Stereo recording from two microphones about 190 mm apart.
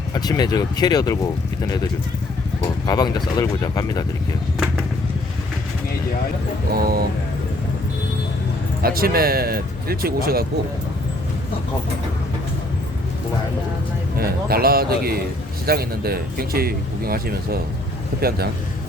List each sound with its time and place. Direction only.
0.1 s speech: 20° left (ahead or behind)
2.6 s speech: 20° left (ahead or behind)
6.7 s speech: 50° right (ahead or behind)
8.8 s speech: 50° right (ahead or behind)
14.2 s speech: 50° right (ahead or behind)